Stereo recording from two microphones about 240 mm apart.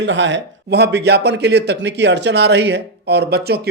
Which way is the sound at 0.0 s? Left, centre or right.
Right.